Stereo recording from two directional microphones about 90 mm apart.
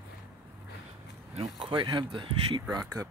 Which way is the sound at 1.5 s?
60° right (ahead or behind).